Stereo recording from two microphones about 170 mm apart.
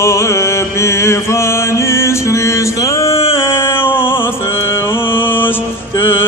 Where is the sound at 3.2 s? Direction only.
35° left (ahead or behind).